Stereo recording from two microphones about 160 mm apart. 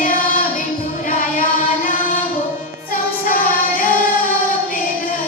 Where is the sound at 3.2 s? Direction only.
65° left (ahead or behind).